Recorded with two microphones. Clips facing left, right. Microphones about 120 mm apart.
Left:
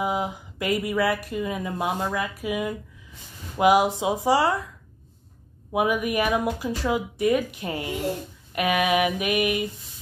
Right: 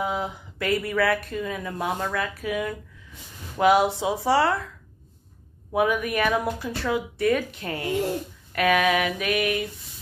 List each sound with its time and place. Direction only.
0.0 s speech: 15° left (ahead or behind)
5.7 s speech: 15° left (ahead or behind)